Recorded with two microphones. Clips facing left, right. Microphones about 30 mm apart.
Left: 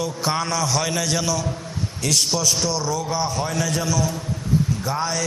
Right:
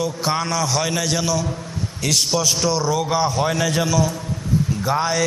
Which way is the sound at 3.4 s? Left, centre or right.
Right.